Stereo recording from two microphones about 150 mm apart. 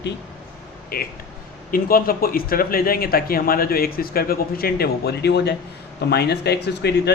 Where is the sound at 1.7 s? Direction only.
75° left (ahead or behind); by 7.1 s 90° left.